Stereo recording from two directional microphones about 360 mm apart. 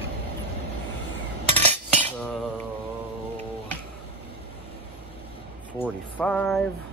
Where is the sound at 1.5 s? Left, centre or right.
Centre.